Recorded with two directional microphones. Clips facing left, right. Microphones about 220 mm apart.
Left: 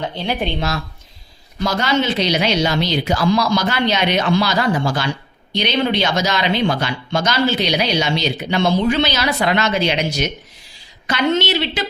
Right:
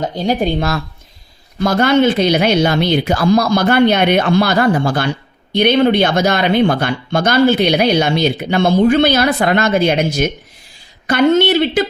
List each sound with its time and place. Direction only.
0.0 s speech: 45° right (ahead or behind)